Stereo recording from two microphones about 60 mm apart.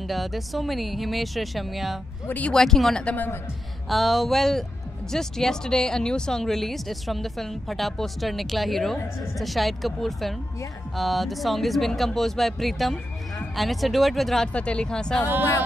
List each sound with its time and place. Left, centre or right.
0.1 s speech: centre
2.2 s speech: left
2.5 s speech: centre
14.5 s speech: centre